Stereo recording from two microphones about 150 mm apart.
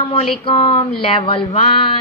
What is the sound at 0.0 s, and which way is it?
Speech, 35° left (ahead or behind).